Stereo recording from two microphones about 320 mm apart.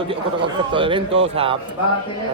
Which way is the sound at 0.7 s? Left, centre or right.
Centre.